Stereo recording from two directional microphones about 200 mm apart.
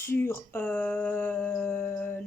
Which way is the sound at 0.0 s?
10° left (ahead or behind).